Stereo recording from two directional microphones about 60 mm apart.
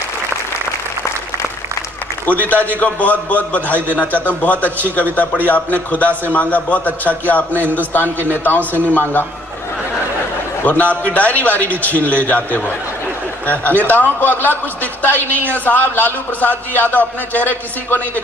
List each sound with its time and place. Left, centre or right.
2.2 s a man's voice: left
10.6 s a man's voice: left